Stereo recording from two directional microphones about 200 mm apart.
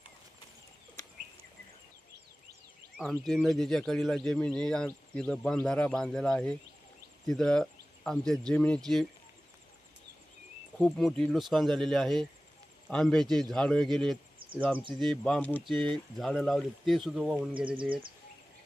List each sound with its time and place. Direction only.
3.0 s speech: centre (ahead or behind)
10.8 s speech: centre (ahead or behind)
15.7 s speech: 25° right (ahead or behind)
16.1 s speech: centre (ahead or behind)